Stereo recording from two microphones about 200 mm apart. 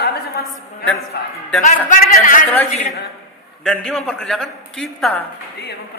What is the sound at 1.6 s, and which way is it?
Speech, 40° left (ahead or behind).